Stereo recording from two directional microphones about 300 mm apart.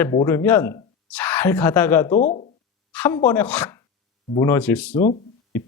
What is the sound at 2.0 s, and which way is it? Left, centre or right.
Speech, left.